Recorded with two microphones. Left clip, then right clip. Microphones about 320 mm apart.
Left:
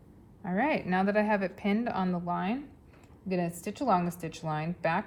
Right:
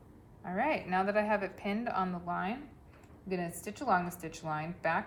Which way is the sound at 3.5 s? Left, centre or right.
Centre.